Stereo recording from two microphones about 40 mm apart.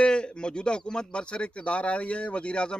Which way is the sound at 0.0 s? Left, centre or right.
Left.